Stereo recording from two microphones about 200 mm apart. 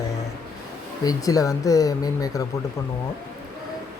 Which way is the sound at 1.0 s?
15° left (ahead or behind).